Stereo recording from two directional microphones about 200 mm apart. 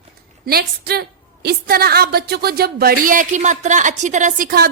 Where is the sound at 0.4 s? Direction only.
50° right (ahead or behind).